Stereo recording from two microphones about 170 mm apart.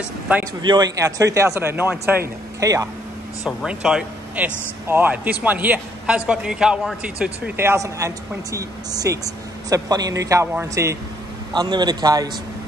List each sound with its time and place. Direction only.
0.6 s speech: 25° right (ahead or behind)
3.4 s a man's voice: 5° right (ahead or behind); by 12.3 s 25° right (ahead or behind)